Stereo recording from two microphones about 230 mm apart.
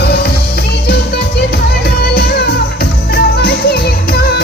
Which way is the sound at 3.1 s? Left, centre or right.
Left.